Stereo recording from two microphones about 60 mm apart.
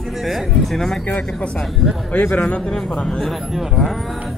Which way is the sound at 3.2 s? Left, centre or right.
Centre.